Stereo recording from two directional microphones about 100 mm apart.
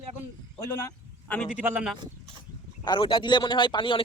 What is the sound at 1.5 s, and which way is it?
Speech, 15° right (ahead or behind).